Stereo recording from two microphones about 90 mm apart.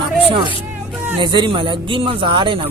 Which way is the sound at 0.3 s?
70° right (ahead or behind).